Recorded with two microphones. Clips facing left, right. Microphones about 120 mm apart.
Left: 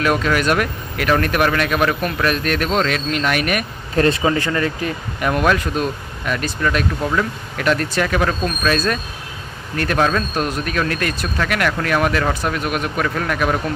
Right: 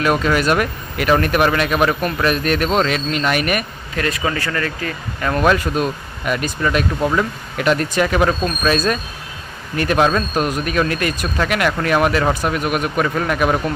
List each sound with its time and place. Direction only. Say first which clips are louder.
0.0 s speech: right 1 dB; centre (ahead or behind)
3.9 s speech: left 5 dB; 30° left (ahead or behind)
5.3 s speech: right 2 dB; centre (ahead or behind)